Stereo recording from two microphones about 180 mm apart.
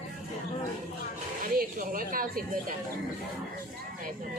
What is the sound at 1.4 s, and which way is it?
Speech, 50° right (ahead or behind).